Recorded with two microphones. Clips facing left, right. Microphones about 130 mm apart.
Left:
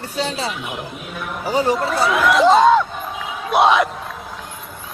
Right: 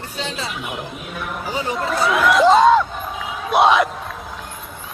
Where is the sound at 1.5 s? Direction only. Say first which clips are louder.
Left 8 dB; 40° left (ahead or behind).